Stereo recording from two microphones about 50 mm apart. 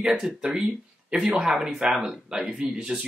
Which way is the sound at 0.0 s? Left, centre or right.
Centre.